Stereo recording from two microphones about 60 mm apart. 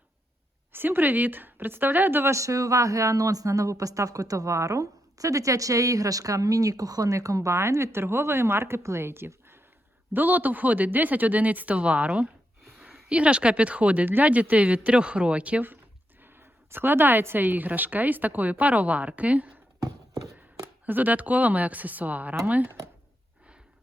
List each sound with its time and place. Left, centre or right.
0.7 s speech: right
2.3 s a woman's voice: right
16.2 s a woman's voice: right
20.8 s a woman's voice: right